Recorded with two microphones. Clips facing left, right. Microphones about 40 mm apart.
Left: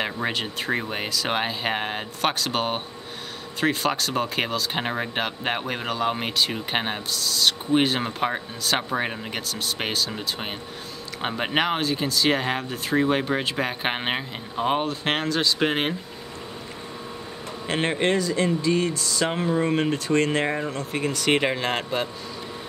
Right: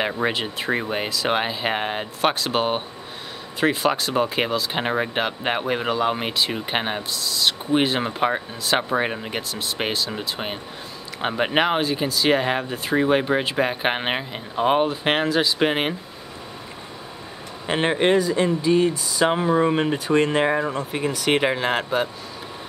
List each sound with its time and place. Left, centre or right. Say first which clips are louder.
0.0 s speech: right 3 dB; centre
17.6 s speech: right 4 dB; centre